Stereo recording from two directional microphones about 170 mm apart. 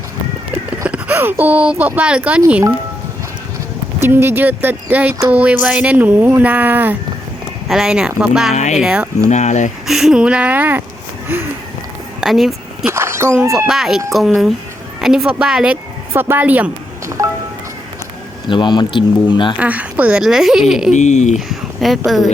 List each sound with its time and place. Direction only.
0.9 s speech: 10° right (ahead or behind)
4.0 s speech: 15° right (ahead or behind)
9.3 s speech: 45° left (ahead or behind)
9.8 s speech: centre (ahead or behind)
12.2 s speech: centre (ahead or behind)
12.8 s a sound: 15° right (ahead or behind)
13.7 s speech: 5° right (ahead or behind)
18.5 s speech: 25° left (ahead or behind)
19.5 s speech: 10° right (ahead or behind)
20.9 s speech: 45° left (ahead or behind)
21.3 s speech: centre (ahead or behind)